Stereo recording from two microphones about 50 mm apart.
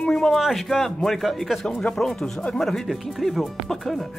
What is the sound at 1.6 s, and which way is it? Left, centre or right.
Speech, centre.